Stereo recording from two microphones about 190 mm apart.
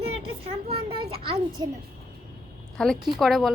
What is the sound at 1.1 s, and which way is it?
Children playing, 30° right (ahead or behind).